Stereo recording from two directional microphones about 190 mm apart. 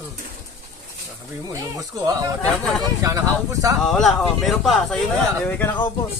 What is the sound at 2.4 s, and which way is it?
Speech, 5° left (ahead or behind).